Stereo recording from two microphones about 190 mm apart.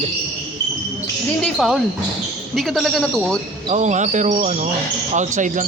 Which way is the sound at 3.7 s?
40° right (ahead or behind).